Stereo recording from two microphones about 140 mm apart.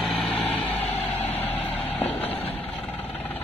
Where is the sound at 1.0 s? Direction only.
50° left (ahead or behind).